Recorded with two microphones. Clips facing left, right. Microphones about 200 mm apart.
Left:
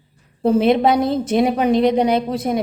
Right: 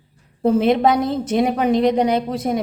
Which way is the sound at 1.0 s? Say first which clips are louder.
Left 2 dB; 30° left (ahead or behind).